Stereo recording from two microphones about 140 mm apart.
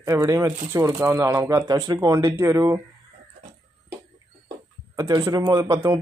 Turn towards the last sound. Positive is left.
turn(degrees=-25)  # may be behind; listen again after turning